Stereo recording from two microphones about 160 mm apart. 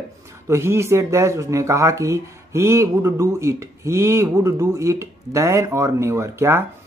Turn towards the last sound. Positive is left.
turn(degrees=-15)  # may be behind; listen again after turning